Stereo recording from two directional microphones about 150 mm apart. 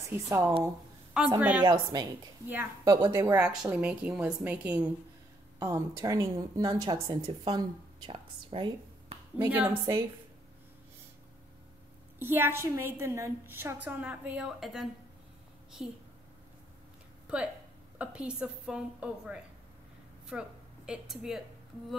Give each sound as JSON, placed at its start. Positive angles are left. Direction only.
{"t": 0.0, "sound": "a woman's voice", "side_deg": -20}
{"t": 1.4, "sound": "a woman's voice", "side_deg": -10}
{"t": 1.7, "sound": "a woman's voice", "side_deg": -20}
{"t": 9.4, "sound": "a woman's voice", "side_deg": -15}
{"t": 12.2, "sound": "a woman's voice", "side_deg": -15}
{"t": 17.9, "sound": "a woman's voice", "side_deg": -10}